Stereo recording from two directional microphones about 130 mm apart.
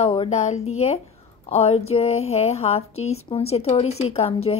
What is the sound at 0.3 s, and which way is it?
A woman's voice, 65° left (ahead or behind).